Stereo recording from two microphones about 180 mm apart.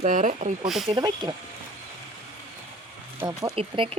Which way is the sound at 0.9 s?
25° right (ahead or behind).